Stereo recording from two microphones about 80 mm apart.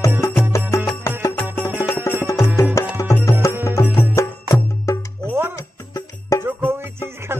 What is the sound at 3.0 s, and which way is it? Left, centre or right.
Music, left.